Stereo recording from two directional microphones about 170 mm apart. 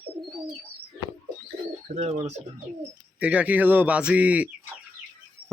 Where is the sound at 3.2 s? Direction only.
10° right (ahead or behind).